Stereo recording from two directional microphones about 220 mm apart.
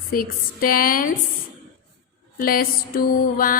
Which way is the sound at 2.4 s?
40° left (ahead or behind).